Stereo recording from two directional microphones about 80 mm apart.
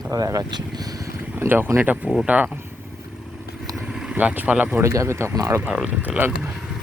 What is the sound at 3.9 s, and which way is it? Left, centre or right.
Speech, centre.